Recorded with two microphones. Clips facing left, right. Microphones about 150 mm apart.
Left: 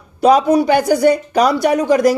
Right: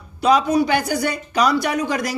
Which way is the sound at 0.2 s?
50° left (ahead or behind).